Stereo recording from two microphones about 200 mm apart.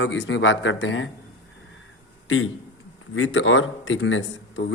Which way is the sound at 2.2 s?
80° left.